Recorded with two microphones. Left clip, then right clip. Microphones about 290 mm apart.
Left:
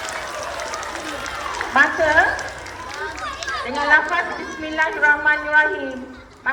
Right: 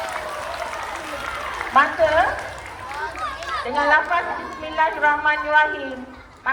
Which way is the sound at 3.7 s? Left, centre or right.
Right.